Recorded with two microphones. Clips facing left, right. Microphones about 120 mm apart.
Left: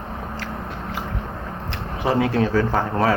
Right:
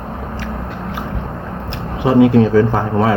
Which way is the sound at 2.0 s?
20° right (ahead or behind).